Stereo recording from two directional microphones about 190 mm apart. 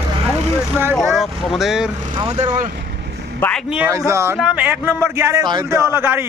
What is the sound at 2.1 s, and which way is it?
Speech, 30° right (ahead or behind).